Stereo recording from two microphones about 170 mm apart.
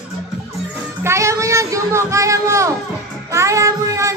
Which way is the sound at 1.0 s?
15° right (ahead or behind).